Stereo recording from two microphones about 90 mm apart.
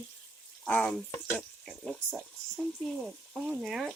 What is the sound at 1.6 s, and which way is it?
Speech, centre (ahead or behind).